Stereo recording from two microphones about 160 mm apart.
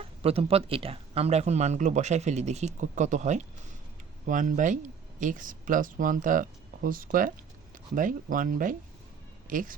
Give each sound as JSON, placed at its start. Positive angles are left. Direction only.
{"t": 0.2, "sound": "speech", "side_deg": -40}